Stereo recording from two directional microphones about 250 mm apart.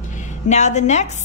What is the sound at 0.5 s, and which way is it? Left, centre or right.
Speech, left.